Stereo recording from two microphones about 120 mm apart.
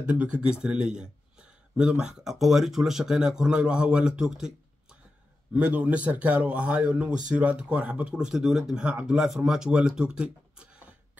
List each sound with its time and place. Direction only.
0.0 s speech: 10° right (ahead or behind)